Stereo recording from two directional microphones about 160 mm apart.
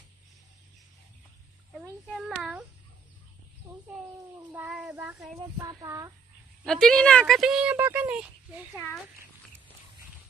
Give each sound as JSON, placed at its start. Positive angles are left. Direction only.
{"t": 1.7, "sound": "a sound", "side_deg": 0}
{"t": 4.5, "sound": "child singing", "side_deg": -10}
{"t": 5.6, "sound": "speech", "side_deg": -20}
{"t": 6.6, "sound": "speech", "side_deg": 5}